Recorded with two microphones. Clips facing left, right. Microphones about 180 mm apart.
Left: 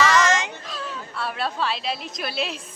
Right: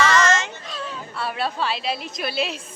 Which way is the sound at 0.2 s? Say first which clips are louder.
Right 1 dB; 15° left (ahead or behind).